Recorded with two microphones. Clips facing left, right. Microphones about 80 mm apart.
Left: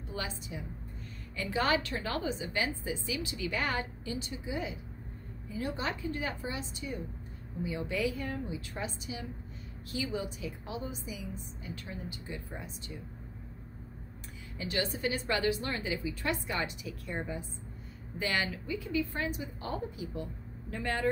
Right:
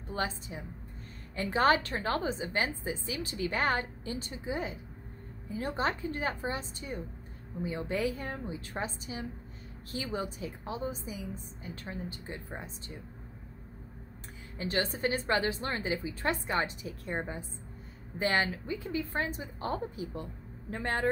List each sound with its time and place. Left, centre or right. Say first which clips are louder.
0.1 s a woman's voice: right 4 dB; right
14.6 s a woman's voice: right 2 dB; right